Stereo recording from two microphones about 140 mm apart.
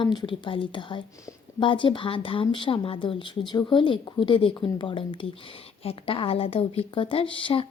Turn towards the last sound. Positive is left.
turn(degrees=40)  # may be behind; listen again after turning